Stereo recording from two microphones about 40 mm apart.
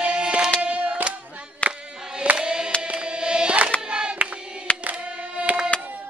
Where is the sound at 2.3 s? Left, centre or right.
Right.